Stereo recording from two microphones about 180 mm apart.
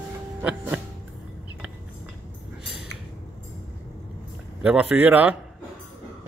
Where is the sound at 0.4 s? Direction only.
5° right (ahead or behind).